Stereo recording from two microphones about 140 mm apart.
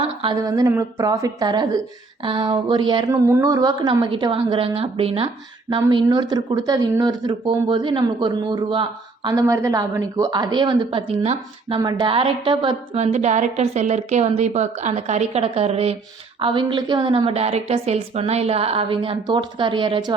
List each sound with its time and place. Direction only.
0.3 s a woman's voice: 25° right (ahead or behind)
3.1 s a woman's voice: 20° right (ahead or behind); by 5.3 s 40° right (ahead or behind)
5.7 s a woman's voice: 30° right (ahead or behind)
9.3 s a woman's voice: 25° right (ahead or behind); by 11.8 s 45° right (ahead or behind)
11.8 s a woman's voice: 30° right (ahead or behind)
13.0 s a woman's voice: 55° right (ahead or behind); by 20.1 s 30° right (ahead or behind)